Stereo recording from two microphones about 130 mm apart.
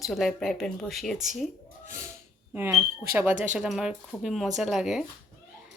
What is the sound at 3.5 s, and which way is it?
Speech, 5° right (ahead or behind).